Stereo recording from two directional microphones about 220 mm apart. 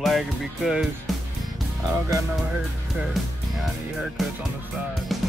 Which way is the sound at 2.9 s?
Centre (ahead or behind).